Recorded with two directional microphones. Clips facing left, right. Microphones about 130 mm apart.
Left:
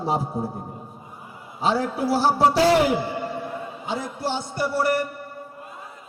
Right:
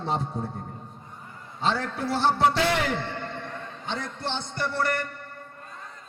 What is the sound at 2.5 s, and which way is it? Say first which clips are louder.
Speech: left 7 dB; 35° left (ahead or behind).